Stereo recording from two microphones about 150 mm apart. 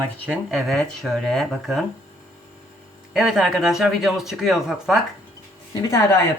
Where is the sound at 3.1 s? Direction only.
5° right (ahead or behind).